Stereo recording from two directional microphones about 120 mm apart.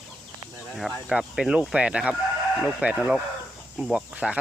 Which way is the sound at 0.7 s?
Centre (ahead or behind).